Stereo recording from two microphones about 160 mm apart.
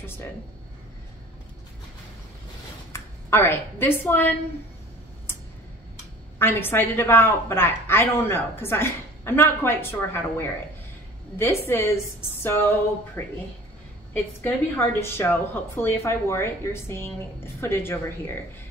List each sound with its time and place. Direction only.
2.9 s a woman's voice: 15° left (ahead or behind)
6.3 s a woman's voice: 15° left (ahead or behind)
15.0 s a woman's voice: 15° left (ahead or behind)